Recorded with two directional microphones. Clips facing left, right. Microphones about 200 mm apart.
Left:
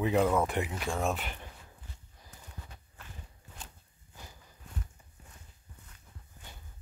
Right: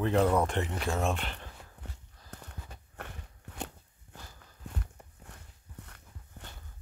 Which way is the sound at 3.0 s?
65° right (ahead or behind).